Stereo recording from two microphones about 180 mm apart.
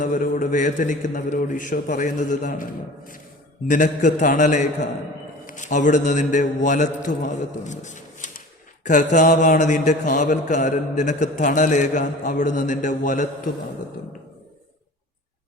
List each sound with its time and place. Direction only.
0.0 s a man's voice: 45° left (ahead or behind)
3.7 s a man's voice: 45° left (ahead or behind)